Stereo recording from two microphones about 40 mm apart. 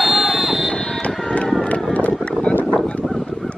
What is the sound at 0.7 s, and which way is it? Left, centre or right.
Vehicle, centre.